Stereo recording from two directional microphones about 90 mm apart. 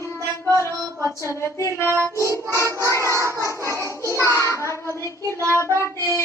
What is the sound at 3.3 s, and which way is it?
Music, 30° left (ahead or behind).